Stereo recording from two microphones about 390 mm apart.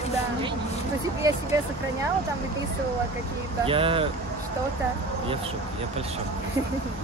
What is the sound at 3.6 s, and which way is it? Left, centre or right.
Speech, centre.